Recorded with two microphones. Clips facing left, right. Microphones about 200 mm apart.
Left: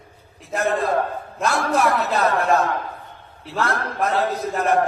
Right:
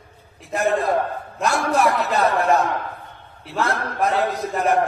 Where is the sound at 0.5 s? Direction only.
15° right (ahead or behind).